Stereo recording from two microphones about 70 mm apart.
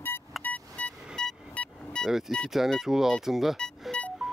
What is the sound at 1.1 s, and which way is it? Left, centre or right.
Music, centre.